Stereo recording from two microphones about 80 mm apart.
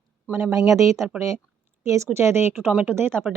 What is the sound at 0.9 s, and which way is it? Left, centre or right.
Speech, centre.